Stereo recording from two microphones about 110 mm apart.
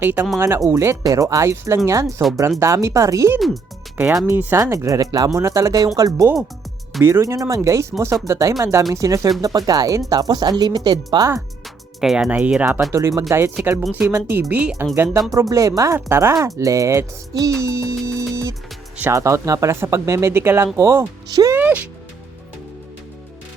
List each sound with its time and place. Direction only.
0.0 s speech: 20° right (ahead or behind); by 11.3 s 40° right (ahead or behind)
11.9 s speech: 5° right (ahead or behind)
12.9 s speech: 30° right (ahead or behind)
14.5 s speech: 10° right (ahead or behind)
14.9 s speech: 20° right (ahead or behind)
21.5 s speech: 15° right (ahead or behind)